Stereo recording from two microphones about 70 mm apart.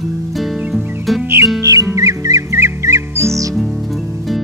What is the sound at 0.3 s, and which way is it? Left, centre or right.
Music, centre.